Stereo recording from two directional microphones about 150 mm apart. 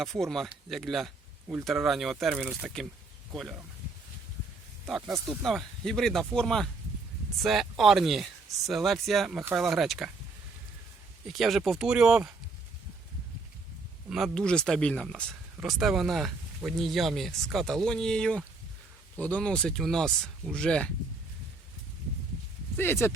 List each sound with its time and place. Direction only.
0.0 s speech: centre (ahead or behind)
4.9 s speech: centre (ahead or behind)
11.3 s speech: centre (ahead or behind)
14.1 s speech: centre (ahead or behind)
22.8 s speech: 15° left (ahead or behind)